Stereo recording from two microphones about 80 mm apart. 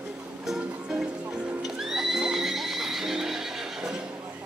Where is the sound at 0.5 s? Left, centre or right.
Centre.